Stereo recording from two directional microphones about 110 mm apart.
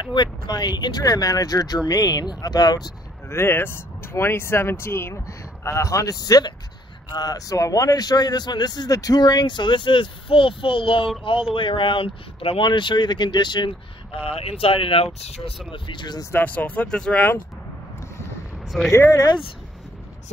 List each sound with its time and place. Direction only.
0.0 s a man's voice: 45° left (ahead or behind)
3.3 s a man's voice: 20° left (ahead or behind); by 15.0 s 55° left (ahead or behind)
15.1 s speech: 70° left (ahead or behind)
15.7 s speech: 45° left (ahead or behind)
16.3 s speech: 15° left (ahead or behind)
18.9 s a man's voice: 30° left (ahead or behind)